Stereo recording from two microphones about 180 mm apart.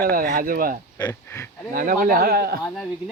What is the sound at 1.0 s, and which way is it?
Speech, 20° left (ahead or behind).